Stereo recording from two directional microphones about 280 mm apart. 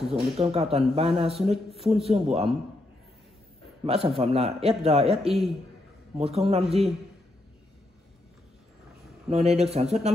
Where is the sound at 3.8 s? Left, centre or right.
Right.